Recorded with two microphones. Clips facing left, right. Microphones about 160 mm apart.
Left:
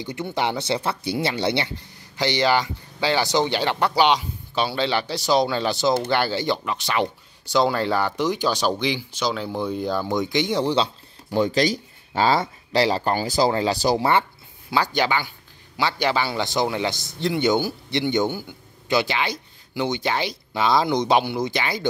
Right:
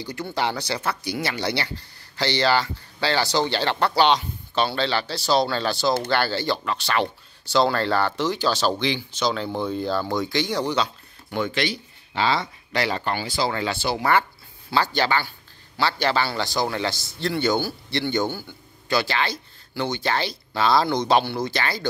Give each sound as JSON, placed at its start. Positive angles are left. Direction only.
{"t": 0.0, "sound": "speech", "side_deg": 20}
{"t": 14.7, "sound": "speech", "side_deg": 15}